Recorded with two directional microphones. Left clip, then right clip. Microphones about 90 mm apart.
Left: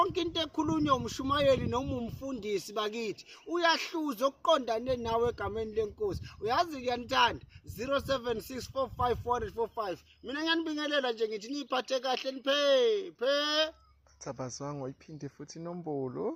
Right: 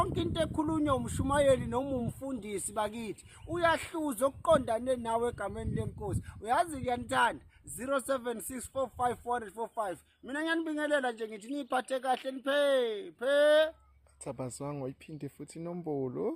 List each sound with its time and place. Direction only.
0.0 s speech: 35° right (ahead or behind)
15.8 s speech: 10° right (ahead or behind)
16.0 s speech: 25° right (ahead or behind)